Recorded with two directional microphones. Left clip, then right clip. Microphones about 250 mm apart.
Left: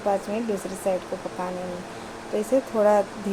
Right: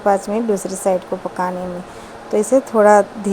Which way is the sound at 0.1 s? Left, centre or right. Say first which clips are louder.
Right 9 dB; right.